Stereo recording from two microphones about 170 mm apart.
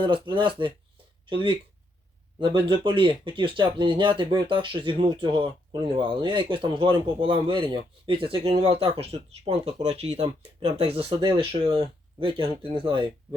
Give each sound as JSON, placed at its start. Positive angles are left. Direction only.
{"t": 0.0, "sound": "speech", "side_deg": -30}